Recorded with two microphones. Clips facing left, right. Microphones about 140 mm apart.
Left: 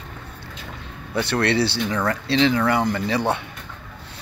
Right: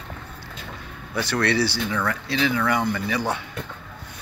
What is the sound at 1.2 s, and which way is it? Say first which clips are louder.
Speech: left 2 dB; 25° left (ahead or behind).